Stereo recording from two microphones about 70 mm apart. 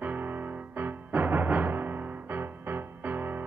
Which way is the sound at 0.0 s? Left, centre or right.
Right.